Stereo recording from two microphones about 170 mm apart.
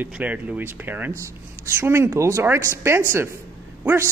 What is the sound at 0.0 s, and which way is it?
Speech, 10° right (ahead or behind).